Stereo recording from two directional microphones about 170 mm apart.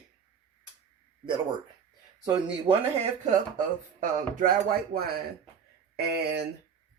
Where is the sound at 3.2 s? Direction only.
50° right (ahead or behind).